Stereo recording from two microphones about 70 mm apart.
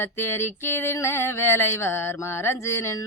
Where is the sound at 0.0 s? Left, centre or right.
Left.